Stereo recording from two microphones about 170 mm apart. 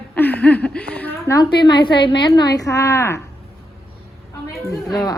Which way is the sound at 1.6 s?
25° left (ahead or behind).